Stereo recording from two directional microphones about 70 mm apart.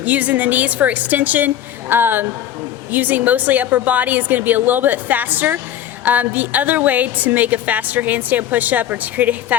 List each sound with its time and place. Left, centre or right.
0.0 s a woman's voice: right